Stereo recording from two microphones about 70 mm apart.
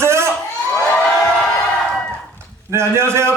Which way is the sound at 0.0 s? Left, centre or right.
Right.